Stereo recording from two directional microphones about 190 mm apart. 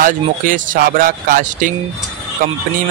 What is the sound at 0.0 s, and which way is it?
Speech, 45° right (ahead or behind).